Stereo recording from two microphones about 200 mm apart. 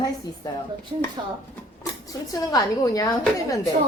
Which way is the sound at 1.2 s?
20° right (ahead or behind).